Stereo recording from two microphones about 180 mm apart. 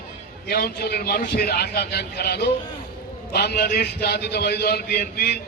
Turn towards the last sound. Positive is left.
turn(degrees=60)  # may be behind; listen again after turning